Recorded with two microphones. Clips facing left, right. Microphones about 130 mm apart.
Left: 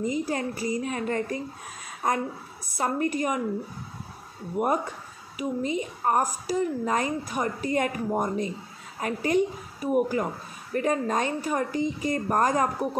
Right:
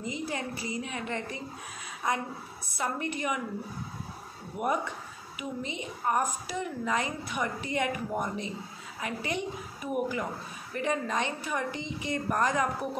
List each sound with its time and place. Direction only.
0.0 s a woman's voice: 45° left (ahead or behind)
4.6 s a woman's voice: 40° left (ahead or behind)